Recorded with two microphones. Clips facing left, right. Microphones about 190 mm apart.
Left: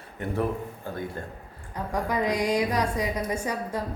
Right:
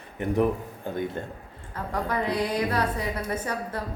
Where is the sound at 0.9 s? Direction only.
20° right (ahead or behind).